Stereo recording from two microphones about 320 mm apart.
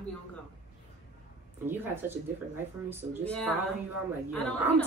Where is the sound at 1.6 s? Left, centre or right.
Centre.